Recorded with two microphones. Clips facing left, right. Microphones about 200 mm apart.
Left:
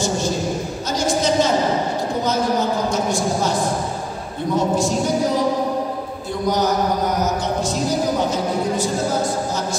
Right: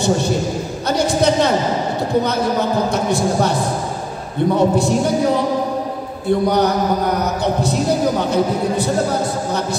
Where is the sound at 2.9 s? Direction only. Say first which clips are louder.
Right 3 dB; 60° right (ahead or behind).